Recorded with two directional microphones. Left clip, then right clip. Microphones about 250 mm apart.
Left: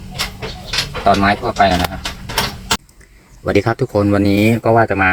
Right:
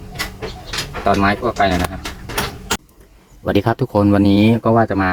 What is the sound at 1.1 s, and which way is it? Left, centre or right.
Speech, centre.